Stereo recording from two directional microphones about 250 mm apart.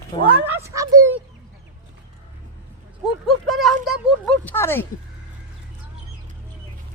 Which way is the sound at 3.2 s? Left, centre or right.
Centre.